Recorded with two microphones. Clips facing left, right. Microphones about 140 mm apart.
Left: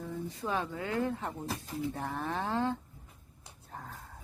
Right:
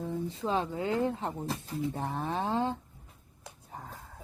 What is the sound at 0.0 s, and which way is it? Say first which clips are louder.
Speech: right 4 dB; 25° right (ahead or behind).